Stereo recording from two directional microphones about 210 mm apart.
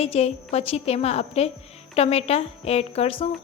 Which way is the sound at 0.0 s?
30° left (ahead or behind).